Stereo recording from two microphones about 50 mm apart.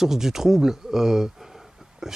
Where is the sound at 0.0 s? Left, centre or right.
Centre.